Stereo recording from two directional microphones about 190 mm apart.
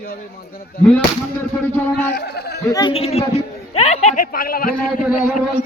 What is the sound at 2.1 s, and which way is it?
Speech, 60° left (ahead or behind).